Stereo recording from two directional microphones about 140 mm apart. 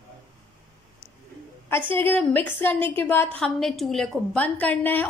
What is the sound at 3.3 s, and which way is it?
A woman's voice, 5° left (ahead or behind).